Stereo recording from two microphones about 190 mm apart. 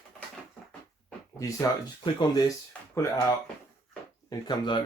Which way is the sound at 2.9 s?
15° left (ahead or behind).